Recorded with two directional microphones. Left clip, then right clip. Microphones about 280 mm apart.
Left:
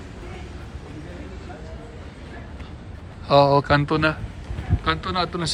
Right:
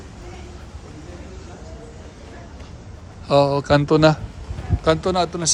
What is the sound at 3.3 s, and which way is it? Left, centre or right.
A man's voice, centre.